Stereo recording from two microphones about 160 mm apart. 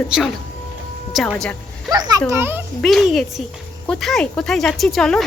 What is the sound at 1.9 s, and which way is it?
Speech, 25° right (ahead or behind).